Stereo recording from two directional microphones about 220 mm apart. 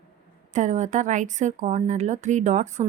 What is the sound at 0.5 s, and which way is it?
A woman's voice, 35° right (ahead or behind).